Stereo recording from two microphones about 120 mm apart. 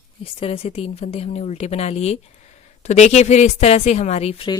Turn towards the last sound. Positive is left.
turn(degrees=55)  # may be behind; listen again after turning